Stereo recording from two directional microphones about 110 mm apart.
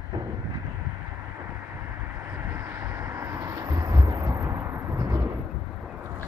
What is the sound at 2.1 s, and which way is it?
Vehicle, 20° right (ahead or behind).